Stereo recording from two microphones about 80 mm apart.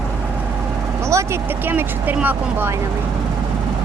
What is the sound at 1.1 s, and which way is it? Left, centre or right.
Speech, right.